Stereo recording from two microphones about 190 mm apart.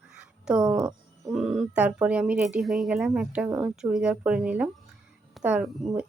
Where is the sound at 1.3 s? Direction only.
Centre (ahead or behind).